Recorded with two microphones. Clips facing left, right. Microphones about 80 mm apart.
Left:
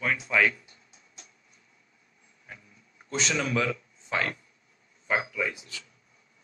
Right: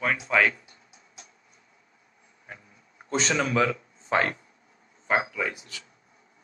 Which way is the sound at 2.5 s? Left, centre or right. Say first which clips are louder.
Right 3 dB; right.